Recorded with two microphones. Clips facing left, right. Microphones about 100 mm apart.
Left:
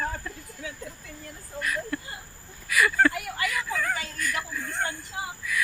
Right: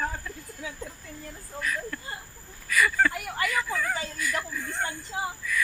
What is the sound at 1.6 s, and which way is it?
Speech, 5° left (ahead or behind).